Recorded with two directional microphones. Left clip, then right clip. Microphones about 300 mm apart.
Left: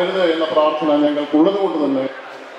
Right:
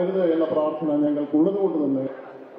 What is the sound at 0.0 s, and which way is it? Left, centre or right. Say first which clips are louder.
A man's voice: left 5 dB; centre.